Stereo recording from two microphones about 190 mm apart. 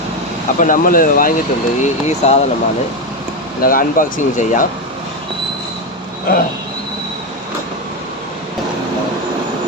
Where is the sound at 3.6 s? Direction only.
45° left (ahead or behind).